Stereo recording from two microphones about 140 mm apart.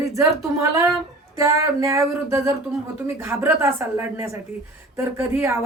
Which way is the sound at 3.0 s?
20° right (ahead or behind).